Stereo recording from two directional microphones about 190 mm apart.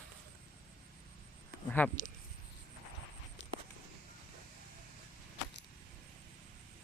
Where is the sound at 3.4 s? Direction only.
65° left (ahead or behind).